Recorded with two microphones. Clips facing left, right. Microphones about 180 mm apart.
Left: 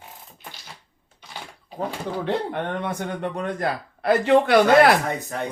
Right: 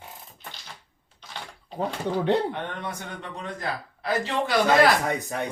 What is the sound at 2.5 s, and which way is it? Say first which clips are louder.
A man's voice: left 5 dB; 55° left (ahead or behind).